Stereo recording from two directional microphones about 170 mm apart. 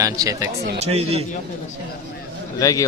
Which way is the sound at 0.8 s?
35° right (ahead or behind).